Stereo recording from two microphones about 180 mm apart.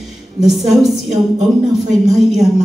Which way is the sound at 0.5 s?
Centre (ahead or behind).